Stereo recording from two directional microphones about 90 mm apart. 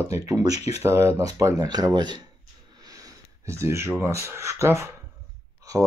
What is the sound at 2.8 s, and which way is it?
Sniff, 40° right (ahead or behind).